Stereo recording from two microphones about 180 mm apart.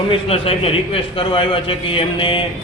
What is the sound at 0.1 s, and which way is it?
A man's voice, 30° left (ahead or behind).